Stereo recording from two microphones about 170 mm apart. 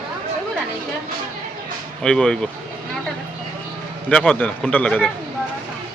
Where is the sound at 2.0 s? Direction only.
5° left (ahead or behind).